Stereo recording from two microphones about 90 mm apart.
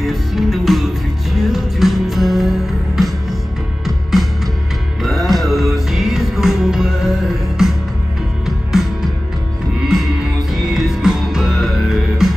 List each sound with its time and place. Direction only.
0.0 s music: centre (ahead or behind)
10.5 s music: centre (ahead or behind)